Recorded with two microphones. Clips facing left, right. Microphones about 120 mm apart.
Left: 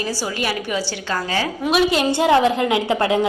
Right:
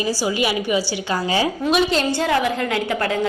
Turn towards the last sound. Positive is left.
turn(degrees=20)  # may be behind; listen again after turning